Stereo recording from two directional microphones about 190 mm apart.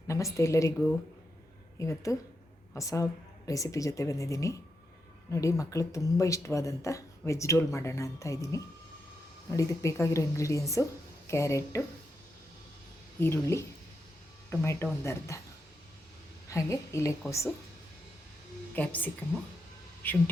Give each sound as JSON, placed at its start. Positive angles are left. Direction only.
{"t": 0.1, "sound": "speech", "side_deg": 15}
{"t": 1.8, "sound": "speech", "side_deg": 15}
{"t": 13.1, "sound": "speech", "side_deg": 15}
{"t": 16.5, "sound": "speech", "side_deg": 15}
{"t": 18.7, "sound": "speech", "side_deg": 10}